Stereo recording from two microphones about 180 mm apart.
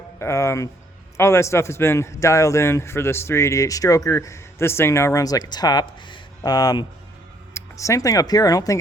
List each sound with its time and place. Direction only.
0.2 s a man's voice: 15° left (ahead or behind)